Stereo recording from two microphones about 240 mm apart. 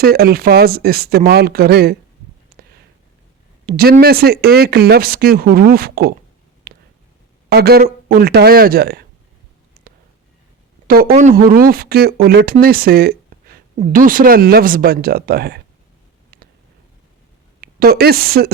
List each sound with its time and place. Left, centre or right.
0.0 s speech: right
3.7 s speech: right
6.7 s a sound: right
7.5 s speech: right
10.8 s speech: right
17.6 s a woman's voice: right